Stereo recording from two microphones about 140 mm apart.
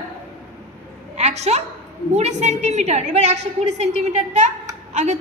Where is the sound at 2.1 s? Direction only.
55° right (ahead or behind).